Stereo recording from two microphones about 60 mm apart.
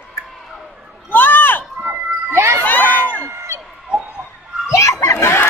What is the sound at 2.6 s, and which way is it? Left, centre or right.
Crowd, left.